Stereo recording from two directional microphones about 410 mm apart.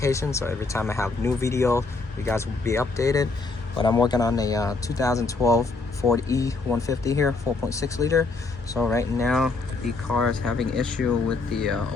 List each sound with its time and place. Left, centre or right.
0.0 s speech: centre